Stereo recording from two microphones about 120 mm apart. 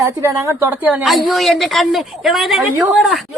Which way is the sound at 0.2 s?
25° right (ahead or behind).